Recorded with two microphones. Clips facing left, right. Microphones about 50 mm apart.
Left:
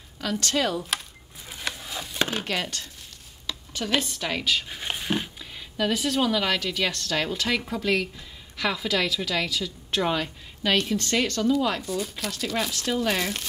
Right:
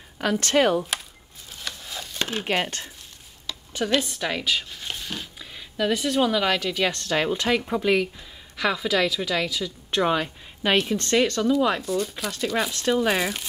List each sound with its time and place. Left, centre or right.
0.2 s speech: right
1.5 s wood: centre
2.1 s chopping: left
2.4 s speech: right
4.0 s a woman's voice: centre
4.6 s a sound: left
5.4 s a woman's voice: centre
8.5 s a woman's voice: centre
10.6 s a woman's voice: right
11.8 s a woman's voice: centre